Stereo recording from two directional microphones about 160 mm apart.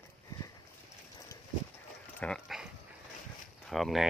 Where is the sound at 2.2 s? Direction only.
Centre (ahead or behind).